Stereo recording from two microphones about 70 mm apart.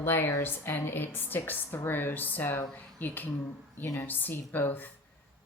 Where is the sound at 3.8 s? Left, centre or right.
Left.